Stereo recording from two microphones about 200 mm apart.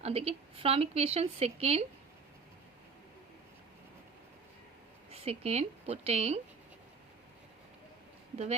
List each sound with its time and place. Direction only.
0.0 s speech: 30° right (ahead or behind)
5.1 s speech: 30° right (ahead or behind)